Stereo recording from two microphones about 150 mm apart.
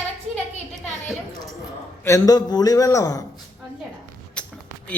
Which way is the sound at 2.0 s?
20° left (ahead or behind).